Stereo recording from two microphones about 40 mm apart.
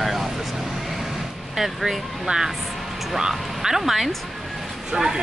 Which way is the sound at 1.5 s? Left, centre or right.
Centre.